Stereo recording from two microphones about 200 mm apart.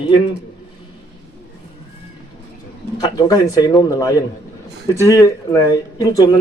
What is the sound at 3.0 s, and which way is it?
Speech, 20° left (ahead or behind).